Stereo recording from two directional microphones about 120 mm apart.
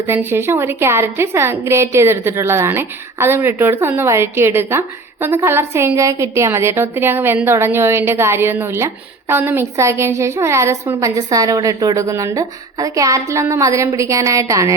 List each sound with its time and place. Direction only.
0.1 s a woman's voice: 20° right (ahead or behind)